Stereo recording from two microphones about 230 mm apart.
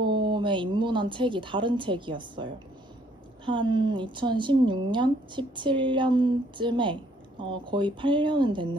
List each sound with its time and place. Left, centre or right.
0.0 s a woman's voice: centre